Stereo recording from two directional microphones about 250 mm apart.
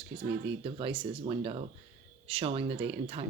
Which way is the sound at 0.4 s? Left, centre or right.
Right.